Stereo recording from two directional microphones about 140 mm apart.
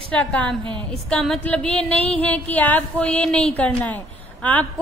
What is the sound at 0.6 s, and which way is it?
Speech, 35° right (ahead or behind).